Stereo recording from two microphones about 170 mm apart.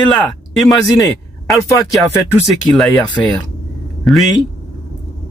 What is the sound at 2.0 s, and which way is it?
Speech, centre (ahead or behind).